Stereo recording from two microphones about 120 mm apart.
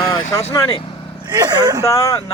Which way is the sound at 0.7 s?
45° left (ahead or behind).